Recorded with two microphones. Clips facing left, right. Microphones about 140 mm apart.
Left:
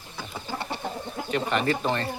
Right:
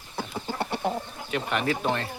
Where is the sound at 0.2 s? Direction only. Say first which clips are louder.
Right 3 dB; 60° right (ahead or behind).